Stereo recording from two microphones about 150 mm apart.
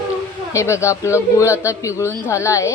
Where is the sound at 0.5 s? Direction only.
20° left (ahead or behind).